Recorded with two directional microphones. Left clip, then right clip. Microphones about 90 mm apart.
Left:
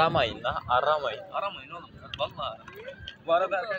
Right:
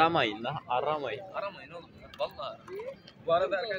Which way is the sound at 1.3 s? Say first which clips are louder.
Left 5 dB; 15° right (ahead or behind).